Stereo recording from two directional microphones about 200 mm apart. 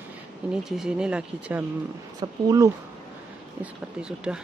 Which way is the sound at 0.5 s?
5° right (ahead or behind).